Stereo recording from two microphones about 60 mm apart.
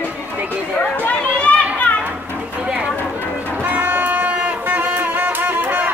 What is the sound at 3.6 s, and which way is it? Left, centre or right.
Music, right.